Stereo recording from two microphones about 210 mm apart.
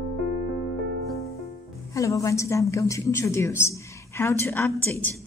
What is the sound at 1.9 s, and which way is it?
A woman's voice, 15° left (ahead or behind).